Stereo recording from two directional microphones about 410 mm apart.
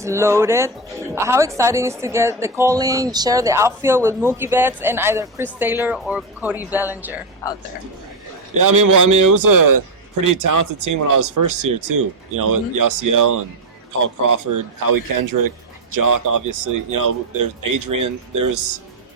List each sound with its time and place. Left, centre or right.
0.0 s speech: centre
8.5 s a man's voice: right